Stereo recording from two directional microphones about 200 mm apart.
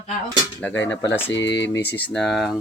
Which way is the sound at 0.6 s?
10° left (ahead or behind).